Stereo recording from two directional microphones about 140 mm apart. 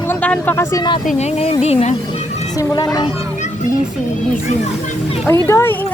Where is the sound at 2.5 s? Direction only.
25° left (ahead or behind).